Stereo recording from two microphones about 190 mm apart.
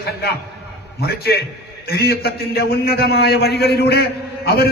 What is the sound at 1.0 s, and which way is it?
A man's voice, 55° left (ahead or behind).